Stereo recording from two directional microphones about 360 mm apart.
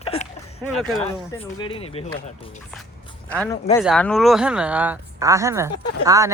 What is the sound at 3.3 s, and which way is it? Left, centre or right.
Speech, centre.